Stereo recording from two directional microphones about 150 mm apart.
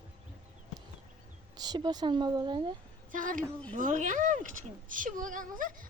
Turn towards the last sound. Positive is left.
turn(degrees=-65)  # may be behind; listen again after turning